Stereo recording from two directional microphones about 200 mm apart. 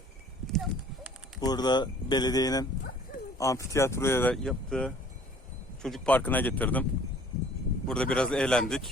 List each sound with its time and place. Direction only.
0.5 s clip-clop: centre (ahead or behind)
1.4 s speech: 20° left (ahead or behind)
7.9 s a man's voice: 5° left (ahead or behind)